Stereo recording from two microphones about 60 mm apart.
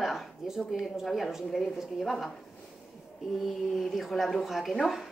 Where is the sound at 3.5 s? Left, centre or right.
Centre.